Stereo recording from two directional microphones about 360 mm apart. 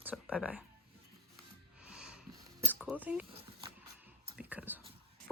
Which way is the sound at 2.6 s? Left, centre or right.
Centre.